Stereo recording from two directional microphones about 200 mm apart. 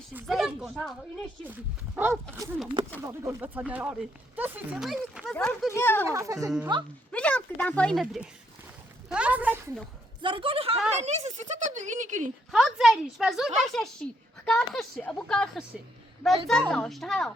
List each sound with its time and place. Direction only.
0.1 s a woman's voice: 5° right (ahead or behind); by 6.1 s 10° left (ahead or behind)
6.1 s speech: 15° right (ahead or behind)
7.1 s a woman's voice: 5° left (ahead or behind)
10.2 s speech: 25° right (ahead or behind)
12.5 s a woman's voice: centre (ahead or behind)